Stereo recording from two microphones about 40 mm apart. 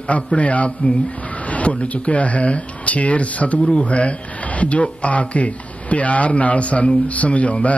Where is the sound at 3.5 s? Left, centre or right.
Left.